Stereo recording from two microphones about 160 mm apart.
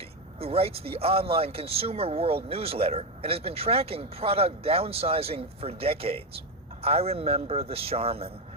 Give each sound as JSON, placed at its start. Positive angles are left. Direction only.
{"t": 0.3, "sound": "speech", "side_deg": -40}